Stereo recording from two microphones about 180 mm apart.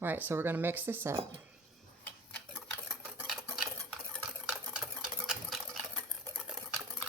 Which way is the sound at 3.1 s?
Centre (ahead or behind).